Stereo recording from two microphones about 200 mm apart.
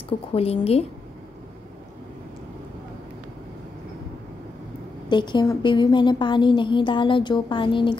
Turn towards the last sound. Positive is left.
turn(degrees=25)  # may be behind; listen again after turning